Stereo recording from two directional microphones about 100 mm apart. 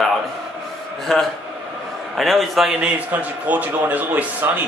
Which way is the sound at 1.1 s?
5° left (ahead or behind).